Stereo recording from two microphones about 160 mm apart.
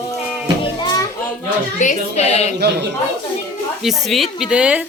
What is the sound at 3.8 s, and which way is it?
Speech, centre (ahead or behind).